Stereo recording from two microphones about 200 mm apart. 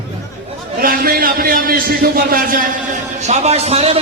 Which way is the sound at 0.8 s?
45° right (ahead or behind).